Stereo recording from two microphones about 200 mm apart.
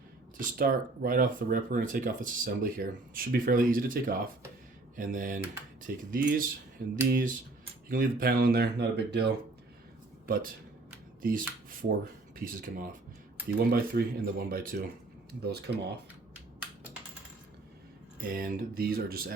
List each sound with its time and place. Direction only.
0.3 s speech: 45° right (ahead or behind)
10.2 s speech: 45° right (ahead or behind)
18.2 s speech: 45° right (ahead or behind)